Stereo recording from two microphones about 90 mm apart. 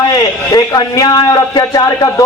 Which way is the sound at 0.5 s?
45° left (ahead or behind).